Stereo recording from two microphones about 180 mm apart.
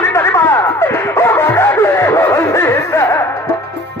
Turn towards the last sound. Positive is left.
turn(degrees=15)  # may be behind; listen again after turning